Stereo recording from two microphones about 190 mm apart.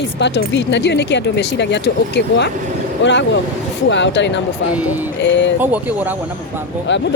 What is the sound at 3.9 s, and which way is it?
Speech, 70° left (ahead or behind).